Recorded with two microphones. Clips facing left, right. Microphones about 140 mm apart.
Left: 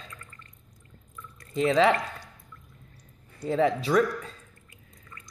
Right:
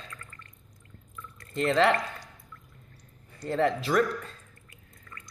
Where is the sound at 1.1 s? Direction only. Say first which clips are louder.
Even; 15° left (ahead or behind).